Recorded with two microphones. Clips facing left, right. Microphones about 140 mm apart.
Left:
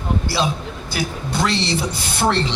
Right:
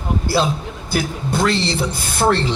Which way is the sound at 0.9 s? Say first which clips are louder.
Right 4 dB; 50° right (ahead or behind).